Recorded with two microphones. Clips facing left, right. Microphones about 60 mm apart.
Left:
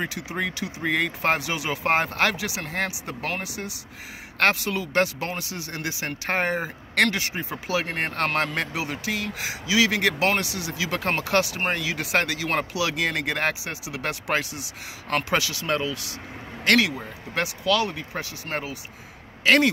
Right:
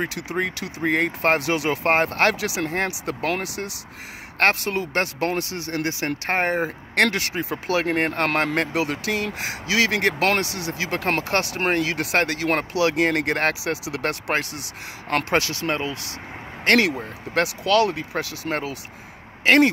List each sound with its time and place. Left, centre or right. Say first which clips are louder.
0.6 s speech: right 1 dB; right
0.8 s speech: right 3 dB; right
2.3 s speech: right 5 dB; right
3.1 s speech: right 5 dB; right
4.4 s speech: right 2 dB; right
7.1 s speech: right 2 dB; right
7.5 s speech: right 5 dB; right
8.5 s speech: right 5 dB; right
13.7 s speech: right 7 dB; right
14.0 s speech: right 1 dB; right
17.3 s speech: right 4 dB; right
19.4 s speech: right 3 dB; right